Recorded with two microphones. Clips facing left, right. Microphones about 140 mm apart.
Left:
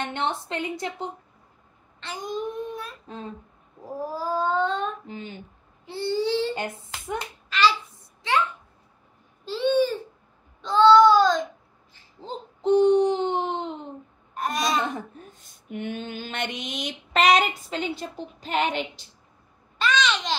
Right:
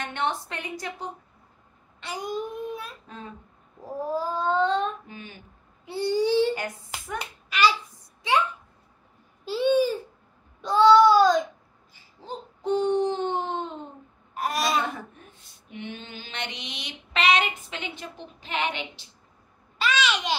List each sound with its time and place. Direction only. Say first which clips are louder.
0.0 s a woman's voice: left 1 dB; 25° left (ahead or behind)
2.0 s babbling: even; 10° right (ahead or behind)
5.0 s a woman's voice: left 5 dB; 25° left (ahead or behind)
5.9 s child singing: right 2 dB; 15° right (ahead or behind)
6.5 s a woman's voice: left 1 dB; 25° left (ahead or behind)
7.4 s a child's voice: left 1 dB; 10° right (ahead or behind)
9.4 s child singing: even; 10° right (ahead or behind)
12.2 s a sound: left 2 dB; 20° left (ahead or behind)
14.3 s a child's voice: even; 5° right (ahead or behind)
15.1 s a sound: left 5 dB; 45° left (ahead or behind)
19.8 s babbling: left 1 dB; 5° right (ahead or behind)